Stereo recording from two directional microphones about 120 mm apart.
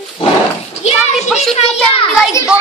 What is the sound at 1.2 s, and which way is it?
Speech, centre (ahead or behind).